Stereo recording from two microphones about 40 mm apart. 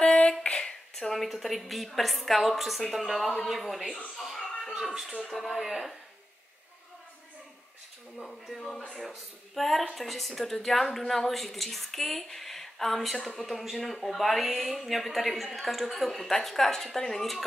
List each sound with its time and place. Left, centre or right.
0.0 s a sound: left
0.9 s a woman's voice: centre
8.2 s a woman's voice: centre